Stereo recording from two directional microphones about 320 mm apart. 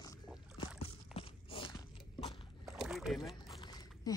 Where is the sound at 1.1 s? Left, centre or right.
Centre.